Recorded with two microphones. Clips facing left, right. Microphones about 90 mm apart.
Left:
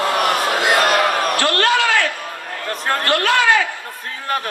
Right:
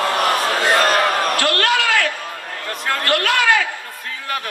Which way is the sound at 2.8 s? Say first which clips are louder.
Left 1 dB; 35° left (ahead or behind).